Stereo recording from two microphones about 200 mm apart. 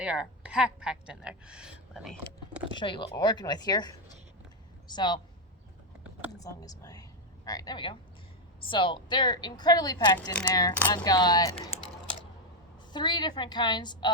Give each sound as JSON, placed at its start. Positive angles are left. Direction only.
{"t": 0.0, "sound": "a woman's voice", "side_deg": -5}
{"t": 2.7, "sound": "a woman's voice", "side_deg": 25}
{"t": 6.4, "sound": "a woman's voice", "side_deg": 20}
{"t": 12.9, "sound": "a woman's voice", "side_deg": 20}